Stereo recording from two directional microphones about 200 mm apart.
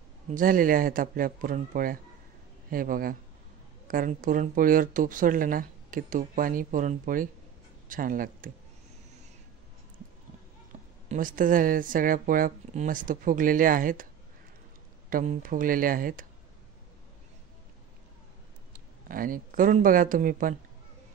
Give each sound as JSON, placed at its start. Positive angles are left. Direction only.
{"t": 0.3, "sound": "speech", "side_deg": -45}
{"t": 10.7, "sound": "a sound", "side_deg": -30}
{"t": 11.1, "sound": "speech", "side_deg": -40}
{"t": 15.0, "sound": "speech", "side_deg": -45}
{"t": 18.7, "sound": "speech", "side_deg": -45}